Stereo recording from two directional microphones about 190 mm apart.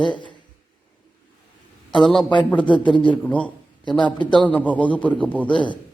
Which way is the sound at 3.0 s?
5° left (ahead or behind).